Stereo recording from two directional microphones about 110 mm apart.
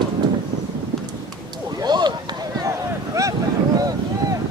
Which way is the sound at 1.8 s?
40° right (ahead or behind).